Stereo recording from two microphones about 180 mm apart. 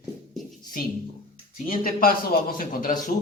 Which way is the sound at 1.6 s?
50° left (ahead or behind).